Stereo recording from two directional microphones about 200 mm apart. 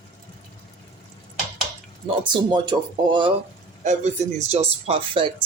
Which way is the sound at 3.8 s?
35° right (ahead or behind).